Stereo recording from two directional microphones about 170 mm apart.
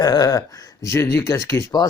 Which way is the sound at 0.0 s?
20° left (ahead or behind).